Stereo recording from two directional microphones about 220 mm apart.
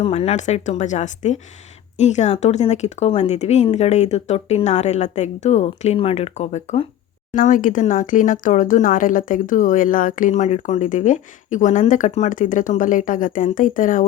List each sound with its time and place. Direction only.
0.0 s speech: 30° left (ahead or behind)